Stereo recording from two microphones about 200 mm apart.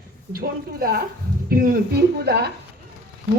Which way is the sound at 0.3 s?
50° right (ahead or behind).